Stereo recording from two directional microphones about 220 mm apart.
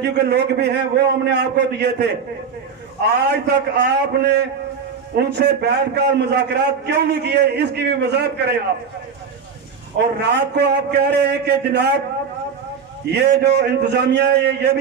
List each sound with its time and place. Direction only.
0.0 s a man's voice: 50° right (ahead or behind)
3.3 s a man's voice: 50° right (ahead or behind)
10.2 s a man's voice: 50° right (ahead or behind)
13.1 s a man's voice: 50° right (ahead or behind)